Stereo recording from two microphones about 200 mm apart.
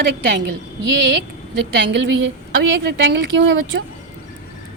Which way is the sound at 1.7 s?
65° right (ahead or behind).